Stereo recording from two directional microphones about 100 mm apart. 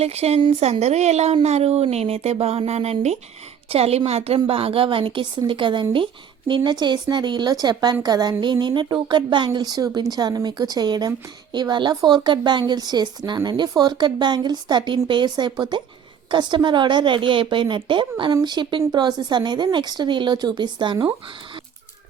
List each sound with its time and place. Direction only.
0.0 s a woman's voice: 90° right
4.4 s speech: 70° right (ahead or behind); by 9.5 s 50° right (ahead or behind)
9.5 s speech: 40° right (ahead or behind)